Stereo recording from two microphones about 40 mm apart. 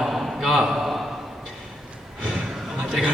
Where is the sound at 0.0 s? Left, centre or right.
Centre.